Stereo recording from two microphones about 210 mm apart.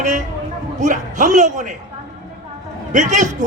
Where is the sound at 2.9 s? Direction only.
35° right (ahead or behind).